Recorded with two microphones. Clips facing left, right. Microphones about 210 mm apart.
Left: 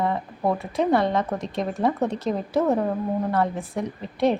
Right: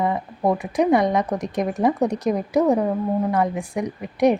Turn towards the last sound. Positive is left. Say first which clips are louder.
# right 4 dB
turn(degrees=-15)  # may be behind; listen again after turning